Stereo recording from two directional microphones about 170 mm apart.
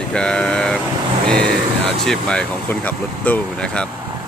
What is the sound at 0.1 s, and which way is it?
Vehicle, 5° left (ahead or behind).